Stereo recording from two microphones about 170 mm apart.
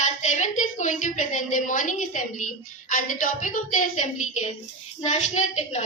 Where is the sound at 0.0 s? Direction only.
45° left (ahead or behind).